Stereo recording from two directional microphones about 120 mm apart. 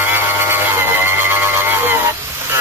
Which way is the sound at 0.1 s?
20° right (ahead or behind).